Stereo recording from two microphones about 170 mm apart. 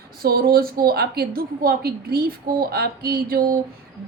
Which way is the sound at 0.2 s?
60° right (ahead or behind).